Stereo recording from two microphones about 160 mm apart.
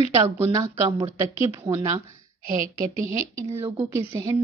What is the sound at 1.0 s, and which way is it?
Speech, 15° right (ahead or behind).